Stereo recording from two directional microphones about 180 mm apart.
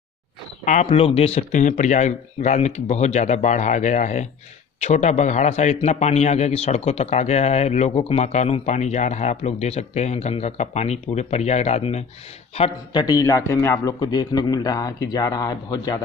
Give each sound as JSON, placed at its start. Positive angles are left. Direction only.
{"t": 0.7, "sound": "a man's voice", "side_deg": 40}